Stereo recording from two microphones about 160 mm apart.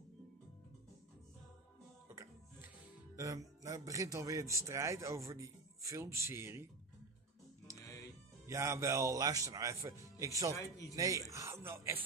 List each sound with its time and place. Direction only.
3.2 s a man's voice: 20° right (ahead or behind)
7.6 s music: 20° left (ahead or behind)
8.5 s a man's voice: 20° right (ahead or behind)
10.5 s a man's voice: 20° left (ahead or behind)
11.0 s a man's voice: 20° right (ahead or behind)